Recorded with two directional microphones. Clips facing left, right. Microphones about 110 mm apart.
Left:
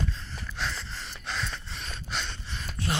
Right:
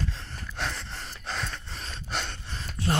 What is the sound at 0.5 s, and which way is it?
Gasp, 55° right (ahead or behind).